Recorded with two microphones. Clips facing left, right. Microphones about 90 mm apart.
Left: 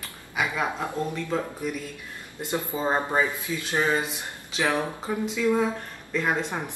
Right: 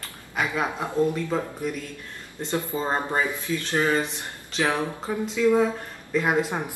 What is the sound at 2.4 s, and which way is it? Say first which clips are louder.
Speech: even; 10° left (ahead or behind).